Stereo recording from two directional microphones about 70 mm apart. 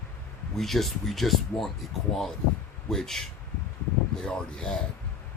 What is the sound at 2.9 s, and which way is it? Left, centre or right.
Speech, centre.